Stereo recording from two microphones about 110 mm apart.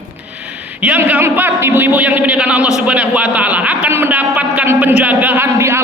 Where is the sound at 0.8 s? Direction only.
15° right (ahead or behind).